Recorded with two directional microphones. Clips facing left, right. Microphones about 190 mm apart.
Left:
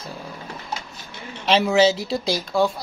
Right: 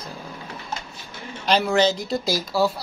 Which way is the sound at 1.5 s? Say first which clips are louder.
Left 2 dB; centre (ahead or behind).